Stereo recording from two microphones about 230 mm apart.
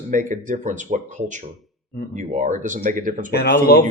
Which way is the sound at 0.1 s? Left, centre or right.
Right.